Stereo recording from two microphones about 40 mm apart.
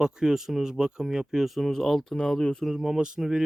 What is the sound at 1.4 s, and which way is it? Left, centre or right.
Speech, centre.